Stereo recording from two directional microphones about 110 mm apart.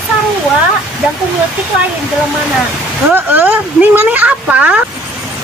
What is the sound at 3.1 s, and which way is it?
Speech, 20° right (ahead or behind).